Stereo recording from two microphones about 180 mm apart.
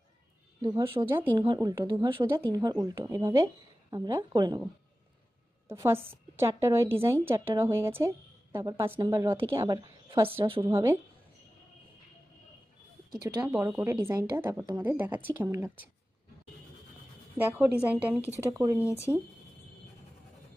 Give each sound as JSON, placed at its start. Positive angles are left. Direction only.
{"t": 0.6, "sound": "speech", "side_deg": -20}
{"t": 5.7, "sound": "a woman's voice", "side_deg": -15}
{"t": 10.4, "sound": "speech", "side_deg": -30}
{"t": 10.7, "sound": "a woman's voice", "side_deg": -15}
{"t": 13.2, "sound": "a woman's voice", "side_deg": -15}
{"t": 17.4, "sound": "a woman's voice", "side_deg": -5}